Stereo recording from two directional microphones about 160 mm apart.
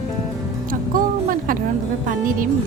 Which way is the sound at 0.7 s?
60° right (ahead or behind).